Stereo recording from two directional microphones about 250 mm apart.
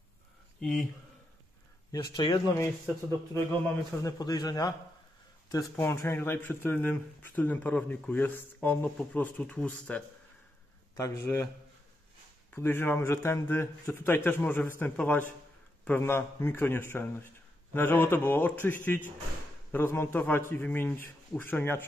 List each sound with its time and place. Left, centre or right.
0.6 s speech: centre
1.9 s speech: centre
12.5 s speech: centre